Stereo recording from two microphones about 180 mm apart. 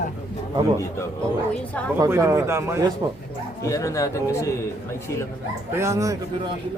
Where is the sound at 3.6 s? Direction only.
15° left (ahead or behind).